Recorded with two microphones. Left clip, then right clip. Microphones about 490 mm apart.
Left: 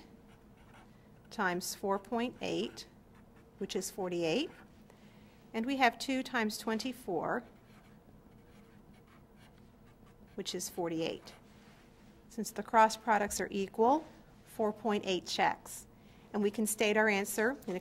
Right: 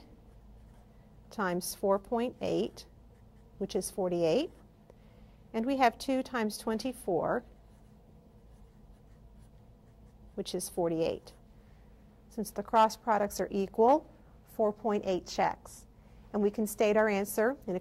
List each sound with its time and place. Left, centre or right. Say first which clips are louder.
1.3 s a woman's voice: right 1 dB; right
5.5 s a woman's voice: right 3 dB; right
10.3 s a woman's voice: right 4 dB; right
12.4 s a woman's voice: right 1 dB; right